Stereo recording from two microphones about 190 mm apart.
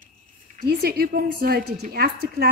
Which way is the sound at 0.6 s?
55° right (ahead or behind).